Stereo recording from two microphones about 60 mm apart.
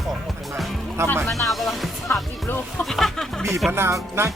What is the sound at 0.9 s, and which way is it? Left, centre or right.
Speech, right.